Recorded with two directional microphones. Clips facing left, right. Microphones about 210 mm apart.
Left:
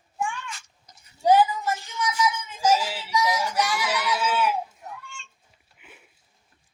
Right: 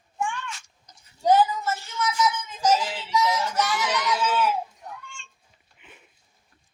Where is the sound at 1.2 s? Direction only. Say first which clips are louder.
Left 1 dB; 10° left (ahead or behind).